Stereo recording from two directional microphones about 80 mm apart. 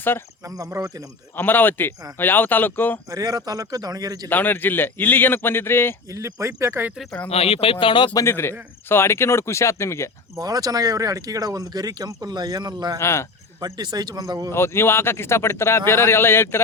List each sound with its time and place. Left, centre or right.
0.4 s speech: right
1.4 s speech: left
3.1 s speech: right
4.3 s speech: left
6.1 s speech: right
7.8 s speech: left
8.1 s speech: left
10.3 s speech: right
13.0 s speech: left
13.7 s speech: right
14.5 s speech: left